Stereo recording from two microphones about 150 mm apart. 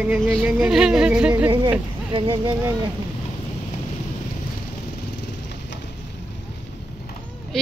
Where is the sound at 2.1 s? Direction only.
35° right (ahead or behind).